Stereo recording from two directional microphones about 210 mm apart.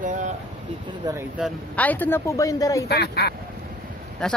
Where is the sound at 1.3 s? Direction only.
5° left (ahead or behind).